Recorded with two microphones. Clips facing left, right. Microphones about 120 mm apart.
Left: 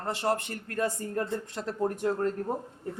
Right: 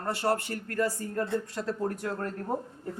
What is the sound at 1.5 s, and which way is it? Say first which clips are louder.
Speech: left 1 dB; 20° left (ahead or behind).